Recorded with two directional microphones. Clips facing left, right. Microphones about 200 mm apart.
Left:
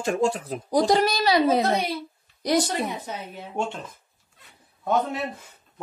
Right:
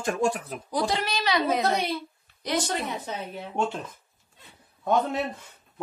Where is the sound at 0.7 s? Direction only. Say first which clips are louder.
Left 7 dB; 40° left (ahead or behind).